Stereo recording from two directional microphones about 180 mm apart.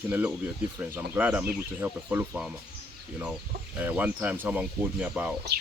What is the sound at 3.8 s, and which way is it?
Speech, 10° right (ahead or behind).